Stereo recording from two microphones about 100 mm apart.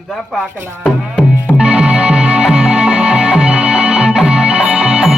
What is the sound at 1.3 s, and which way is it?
Music, 15° left (ahead or behind).